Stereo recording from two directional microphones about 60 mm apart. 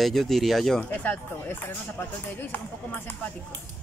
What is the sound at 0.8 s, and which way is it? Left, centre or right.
Speech, left.